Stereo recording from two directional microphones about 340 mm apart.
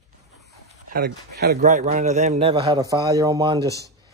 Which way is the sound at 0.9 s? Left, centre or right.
Right.